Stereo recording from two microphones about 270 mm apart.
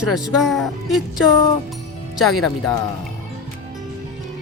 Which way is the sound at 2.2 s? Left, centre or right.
Centre.